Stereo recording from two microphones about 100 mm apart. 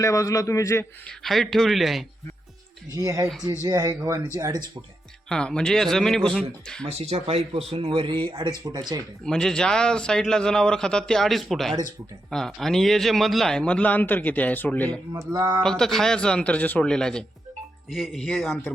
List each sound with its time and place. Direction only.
0.0 s a man's voice: 35° left (ahead or behind)
1.0 s speech: centre (ahead or behind)
2.9 s speech: 35° right (ahead or behind)
5.3 s a man's voice: 5° left (ahead or behind)
6.8 s speech: 90° right; by 9.0 s 45° right (ahead or behind)
9.2 s a man's voice: 5° left (ahead or behind)
15.3 s speech: 40° right (ahead or behind)
15.6 s a man's voice: 5° left (ahead or behind)